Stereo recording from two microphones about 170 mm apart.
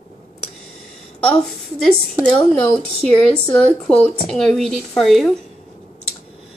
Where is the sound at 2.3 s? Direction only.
5° left (ahead or behind).